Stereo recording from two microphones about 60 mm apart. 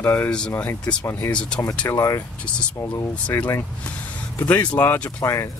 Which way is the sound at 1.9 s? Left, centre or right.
Left.